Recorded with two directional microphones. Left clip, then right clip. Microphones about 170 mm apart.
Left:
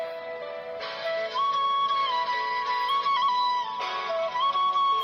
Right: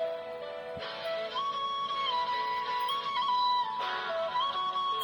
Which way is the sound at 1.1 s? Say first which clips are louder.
Left 8 dB; 20° left (ahead or behind).